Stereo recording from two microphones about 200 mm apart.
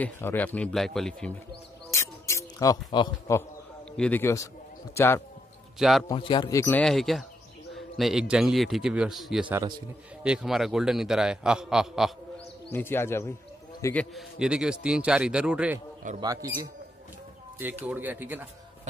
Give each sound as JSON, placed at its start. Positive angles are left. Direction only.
{"t": 0.0, "sound": "a man's voice", "side_deg": 10}
{"t": 1.9, "sound": "music", "side_deg": 15}
{"t": 3.9, "sound": "speech", "side_deg": 5}
{"t": 5.8, "sound": "a man's voice", "side_deg": 0}
{"t": 6.0, "sound": "speech", "side_deg": 25}
{"t": 6.8, "sound": "a man's voice", "side_deg": 0}
{"t": 12.7, "sound": "a man's voice", "side_deg": 10}
{"t": 14.1, "sound": "a man's voice", "side_deg": -5}
{"t": 16.2, "sound": "speech", "side_deg": -15}